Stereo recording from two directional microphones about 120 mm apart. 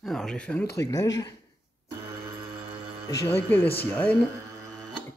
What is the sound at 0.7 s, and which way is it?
Speech, 30° left (ahead or behind).